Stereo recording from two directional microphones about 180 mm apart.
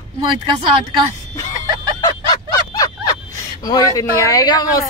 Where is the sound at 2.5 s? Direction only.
20° left (ahead or behind).